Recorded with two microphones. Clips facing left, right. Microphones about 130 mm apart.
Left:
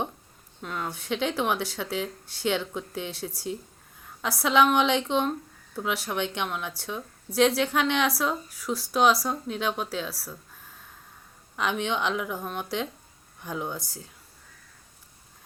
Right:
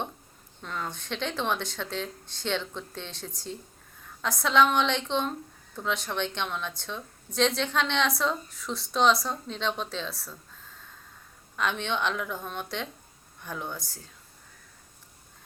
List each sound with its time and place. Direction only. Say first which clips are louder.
0.6 s a woman's voice: left 2 dB; 5° left (ahead or behind)
11.5 s a woman's voice: left 2 dB; 10° left (ahead or behind)